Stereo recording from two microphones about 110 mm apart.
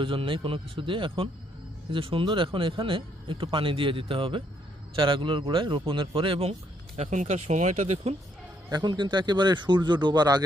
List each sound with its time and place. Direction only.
0.0 s speech: 55° right (ahead or behind)
6.5 s speech: 85° right
8.7 s speech: 45° right (ahead or behind)